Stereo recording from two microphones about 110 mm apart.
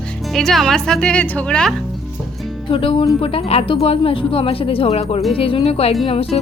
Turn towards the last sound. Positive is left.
turn(degrees=60)  # may be behind; listen again after turning